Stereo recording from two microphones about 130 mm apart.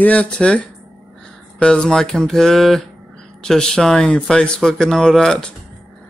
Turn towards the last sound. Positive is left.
turn(degrees=5)  # may be behind; listen again after turning